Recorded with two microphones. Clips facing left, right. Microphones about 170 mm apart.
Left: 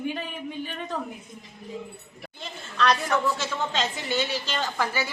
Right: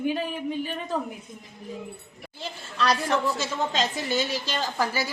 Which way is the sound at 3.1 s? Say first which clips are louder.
Even; 35° right (ahead or behind).